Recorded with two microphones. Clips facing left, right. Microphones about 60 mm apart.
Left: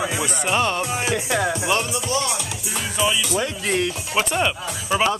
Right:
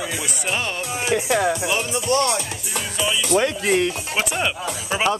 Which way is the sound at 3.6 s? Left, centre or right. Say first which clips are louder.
Right 3 dB; centre.